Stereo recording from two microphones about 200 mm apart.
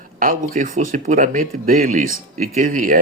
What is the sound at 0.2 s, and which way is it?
Speech, 40° right (ahead or behind).